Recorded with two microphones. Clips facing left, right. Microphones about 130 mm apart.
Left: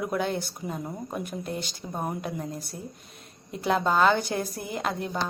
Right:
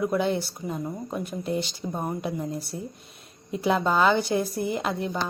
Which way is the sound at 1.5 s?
45° left (ahead or behind).